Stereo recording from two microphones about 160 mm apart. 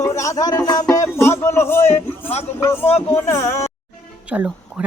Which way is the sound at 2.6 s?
15° left (ahead or behind).